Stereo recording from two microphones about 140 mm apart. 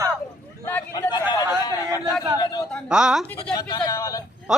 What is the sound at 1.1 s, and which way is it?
Speech, 30° left (ahead or behind).